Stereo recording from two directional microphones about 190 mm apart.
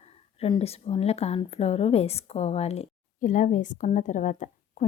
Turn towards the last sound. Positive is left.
turn(degrees=40)  # may be behind; listen again after turning